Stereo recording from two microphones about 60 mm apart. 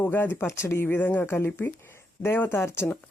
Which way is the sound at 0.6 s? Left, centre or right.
Left.